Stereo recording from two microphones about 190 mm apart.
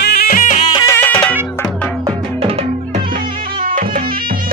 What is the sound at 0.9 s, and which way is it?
Music, 10° left (ahead or behind).